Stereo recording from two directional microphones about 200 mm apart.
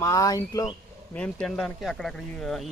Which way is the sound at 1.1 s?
5° left (ahead or behind).